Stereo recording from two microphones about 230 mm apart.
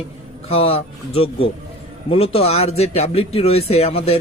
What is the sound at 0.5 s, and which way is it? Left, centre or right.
Speech, left.